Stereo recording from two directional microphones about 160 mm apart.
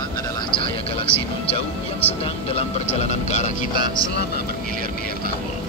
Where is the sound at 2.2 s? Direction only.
40° left (ahead or behind).